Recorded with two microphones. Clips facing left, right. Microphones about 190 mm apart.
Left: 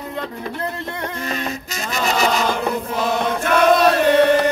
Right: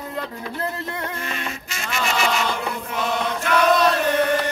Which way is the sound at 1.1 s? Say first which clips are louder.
Left 5 dB; 40° left (ahead or behind).